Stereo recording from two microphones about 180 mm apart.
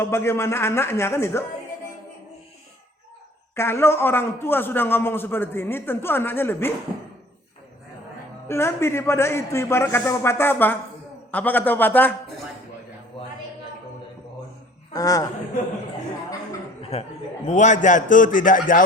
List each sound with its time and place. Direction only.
0.0 s a man's voice: 15° left (ahead or behind)
3.5 s a man's voice: 15° left (ahead or behind)
8.4 s a man's voice: 15° left (ahead or behind)
14.9 s a man's voice: 20° left (ahead or behind)
16.8 s a man's voice: 35° left (ahead or behind)